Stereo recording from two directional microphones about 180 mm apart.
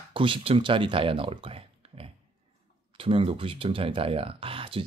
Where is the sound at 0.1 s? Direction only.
30° right (ahead or behind).